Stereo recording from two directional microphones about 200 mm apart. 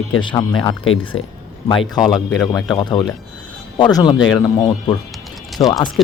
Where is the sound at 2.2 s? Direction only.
10° left (ahead or behind).